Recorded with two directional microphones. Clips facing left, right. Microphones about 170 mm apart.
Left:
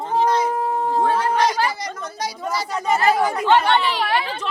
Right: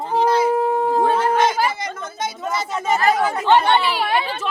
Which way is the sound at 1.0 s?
25° right (ahead or behind).